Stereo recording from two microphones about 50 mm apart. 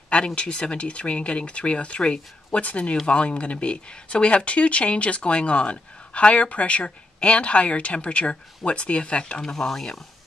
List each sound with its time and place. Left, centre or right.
0.1 s speech: left
9.4 s speech: centre